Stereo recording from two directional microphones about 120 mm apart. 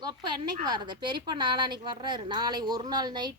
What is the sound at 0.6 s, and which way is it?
A woman's voice, 35° right (ahead or behind).